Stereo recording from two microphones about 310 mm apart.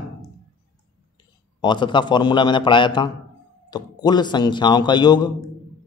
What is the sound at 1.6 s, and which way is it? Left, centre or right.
Speech, centre.